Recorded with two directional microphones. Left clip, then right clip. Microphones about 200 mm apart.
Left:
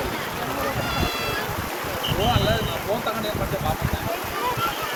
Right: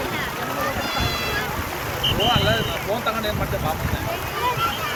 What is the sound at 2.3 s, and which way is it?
Speech, 20° left (ahead or behind).